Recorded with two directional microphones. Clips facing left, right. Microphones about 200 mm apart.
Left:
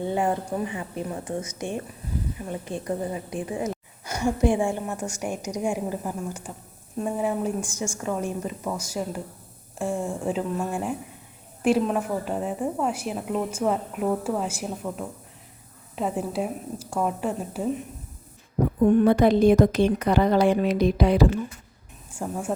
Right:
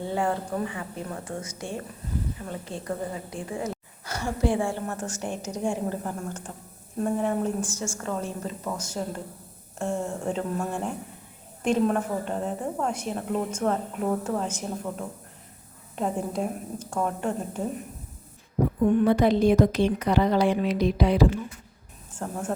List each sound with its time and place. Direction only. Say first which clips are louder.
0.0 s a woman's voice: left 2 dB; 20° left (ahead or behind)
19.0 s a woman's voice: left 2 dB; 50° left (ahead or behind)
22.1 s speech: left 2 dB; 10° left (ahead or behind)